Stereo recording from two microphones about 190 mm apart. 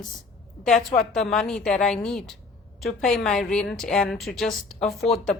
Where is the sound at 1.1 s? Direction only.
5° left (ahead or behind).